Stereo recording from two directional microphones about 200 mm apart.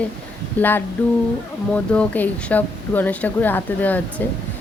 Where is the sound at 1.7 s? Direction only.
5° left (ahead or behind).